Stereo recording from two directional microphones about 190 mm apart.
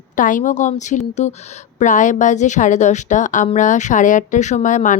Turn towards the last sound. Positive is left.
turn(degrees=40)  # may be behind; listen again after turning